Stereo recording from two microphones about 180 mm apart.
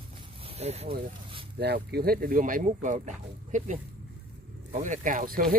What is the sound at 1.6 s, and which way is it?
Speech, 65° right (ahead or behind).